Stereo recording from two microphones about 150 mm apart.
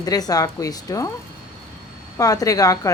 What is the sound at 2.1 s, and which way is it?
Speech, 25° left (ahead or behind).